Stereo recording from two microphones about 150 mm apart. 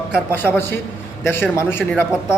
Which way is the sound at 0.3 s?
15° left (ahead or behind).